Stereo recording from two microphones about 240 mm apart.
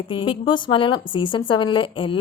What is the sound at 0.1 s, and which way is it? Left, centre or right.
A woman's voice, left.